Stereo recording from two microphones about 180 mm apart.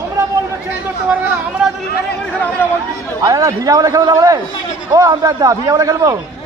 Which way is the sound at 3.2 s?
20° right (ahead or behind).